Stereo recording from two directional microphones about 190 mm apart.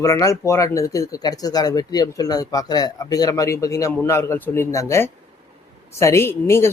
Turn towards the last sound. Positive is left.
turn(degrees=15)  # may be behind; listen again after turning